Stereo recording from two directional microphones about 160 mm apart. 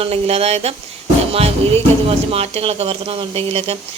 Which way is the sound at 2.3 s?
40° right (ahead or behind).